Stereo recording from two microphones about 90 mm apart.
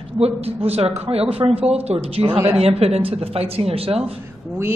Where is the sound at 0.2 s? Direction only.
90° right.